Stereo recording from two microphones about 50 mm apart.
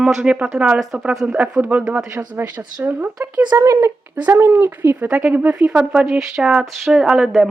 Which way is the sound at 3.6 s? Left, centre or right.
Right.